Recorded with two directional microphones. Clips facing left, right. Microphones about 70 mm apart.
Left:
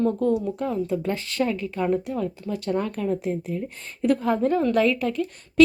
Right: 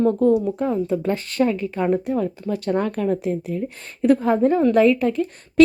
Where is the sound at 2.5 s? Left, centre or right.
Right.